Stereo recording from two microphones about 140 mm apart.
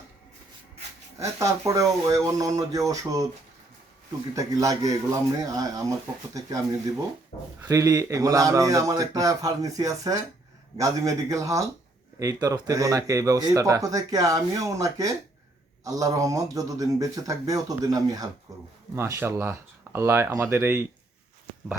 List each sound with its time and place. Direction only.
1.2 s speech: 20° right (ahead or behind)
4.4 s speech: 25° right (ahead or behind)
7.7 s speech: 20° right (ahead or behind)